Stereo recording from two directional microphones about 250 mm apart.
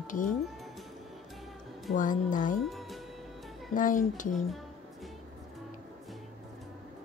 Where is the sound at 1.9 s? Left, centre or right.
Left.